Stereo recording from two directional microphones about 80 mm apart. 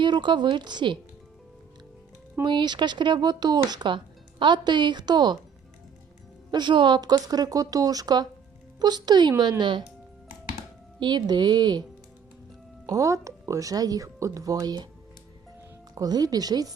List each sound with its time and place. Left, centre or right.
0.0 s a woman's voice: right
2.4 s speech: right
6.5 s speech: right
11.0 s speech: right
12.8 s speech: right
16.0 s speech: right